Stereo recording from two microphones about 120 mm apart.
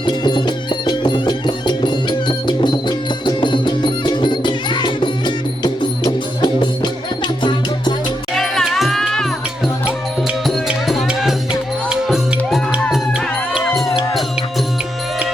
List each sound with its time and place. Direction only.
0.0 s music: 40° left (ahead or behind)
8.4 s music: 5° left (ahead or behind)
10.2 s music: centre (ahead or behind)